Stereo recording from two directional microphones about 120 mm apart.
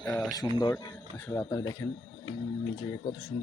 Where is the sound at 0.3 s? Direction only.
30° left (ahead or behind).